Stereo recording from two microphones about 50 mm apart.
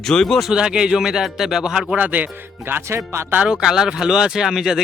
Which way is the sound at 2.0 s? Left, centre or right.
Right.